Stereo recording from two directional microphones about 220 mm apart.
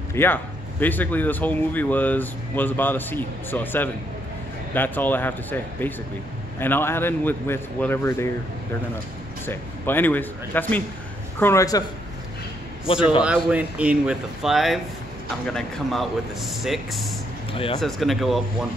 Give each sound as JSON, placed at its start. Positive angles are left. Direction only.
{"t": 0.1, "sound": "speech", "side_deg": 10}
{"t": 9.5, "sound": "speech", "side_deg": 10}
{"t": 13.2, "sound": "speech", "side_deg": -5}
{"t": 17.5, "sound": "speech", "side_deg": 25}
{"t": 17.7, "sound": "speech", "side_deg": 0}